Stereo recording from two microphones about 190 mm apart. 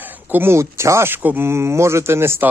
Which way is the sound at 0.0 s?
10° right (ahead or behind).